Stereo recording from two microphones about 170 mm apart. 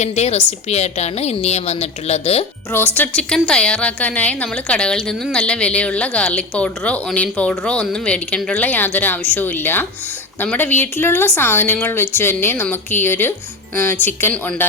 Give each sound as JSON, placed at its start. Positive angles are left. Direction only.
{"t": 0.0, "sound": "a woman's voice", "side_deg": 40}
{"t": 2.7, "sound": "speech", "side_deg": 10}